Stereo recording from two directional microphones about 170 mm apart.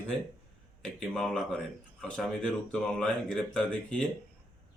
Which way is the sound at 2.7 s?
5° left (ahead or behind).